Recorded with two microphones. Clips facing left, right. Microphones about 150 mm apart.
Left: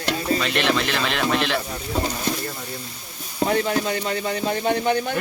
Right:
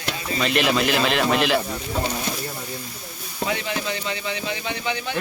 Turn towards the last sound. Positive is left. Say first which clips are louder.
# left 7 dB
turn(degrees=50)  # may be behind; listen again after turning